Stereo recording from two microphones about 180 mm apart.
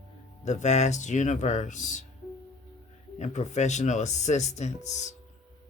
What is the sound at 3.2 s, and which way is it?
Speech, 40° left (ahead or behind).